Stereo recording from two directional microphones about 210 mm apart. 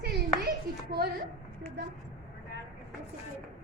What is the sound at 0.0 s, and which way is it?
Clapping, 55° right (ahead or behind).